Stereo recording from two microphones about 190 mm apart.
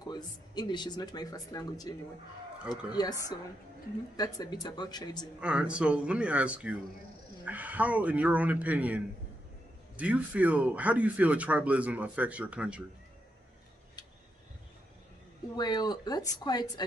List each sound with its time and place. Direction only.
0.0 s speech: 20° left (ahead or behind)
5.4 s speech: 5° right (ahead or behind)
15.5 s speech: 20° left (ahead or behind)